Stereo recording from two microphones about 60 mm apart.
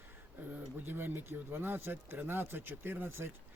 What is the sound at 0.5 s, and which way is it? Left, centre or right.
Speech, right.